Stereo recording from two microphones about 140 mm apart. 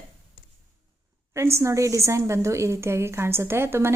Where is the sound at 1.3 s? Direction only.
20° right (ahead or behind).